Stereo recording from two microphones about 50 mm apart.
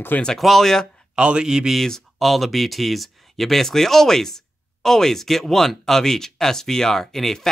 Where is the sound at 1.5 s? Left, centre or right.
Centre.